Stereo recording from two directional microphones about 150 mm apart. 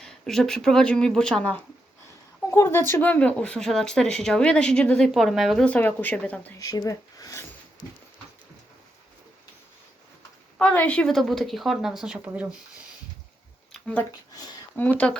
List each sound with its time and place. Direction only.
0.0 s speech: 5° left (ahead or behind)
2.5 s speech: 15° left (ahead or behind)
6.6 s speech: 25° left (ahead or behind)
10.6 s speech: 10° left (ahead or behind); by 12.5 s 10° right (ahead or behind)
13.7 s speech: 10° left (ahead or behind)